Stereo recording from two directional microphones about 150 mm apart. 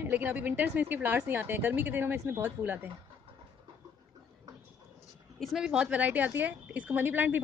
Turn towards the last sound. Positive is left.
turn(degrees=-10)  # may be behind; listen again after turning